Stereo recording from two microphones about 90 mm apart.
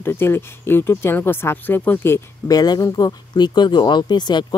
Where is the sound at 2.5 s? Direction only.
45° left (ahead or behind).